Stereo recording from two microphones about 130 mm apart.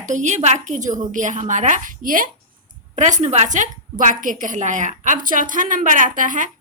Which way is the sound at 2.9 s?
65° right (ahead or behind).